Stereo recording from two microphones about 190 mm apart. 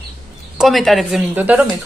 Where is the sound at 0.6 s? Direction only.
Centre (ahead or behind).